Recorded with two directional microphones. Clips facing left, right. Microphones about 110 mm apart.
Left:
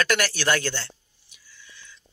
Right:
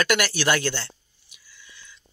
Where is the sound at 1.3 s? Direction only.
10° right (ahead or behind).